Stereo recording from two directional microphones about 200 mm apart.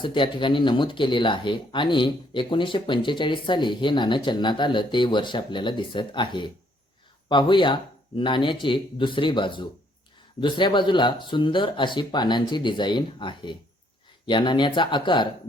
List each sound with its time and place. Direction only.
0.0 s speech: 25° left (ahead or behind)